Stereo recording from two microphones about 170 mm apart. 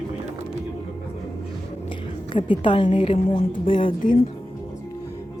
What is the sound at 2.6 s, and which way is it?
A woman's voice, 30° left (ahead or behind).